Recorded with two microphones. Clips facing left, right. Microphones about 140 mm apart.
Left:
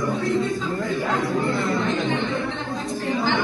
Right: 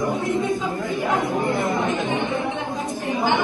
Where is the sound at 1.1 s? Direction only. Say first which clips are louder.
Right 2 dB; 20° right (ahead or behind).